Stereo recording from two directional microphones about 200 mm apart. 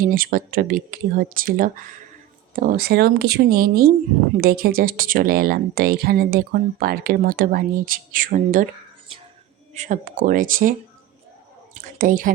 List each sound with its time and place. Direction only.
0.0 s speech: 45° right (ahead or behind)
9.7 s speech: 40° right (ahead or behind)
11.8 s speech: 40° right (ahead or behind)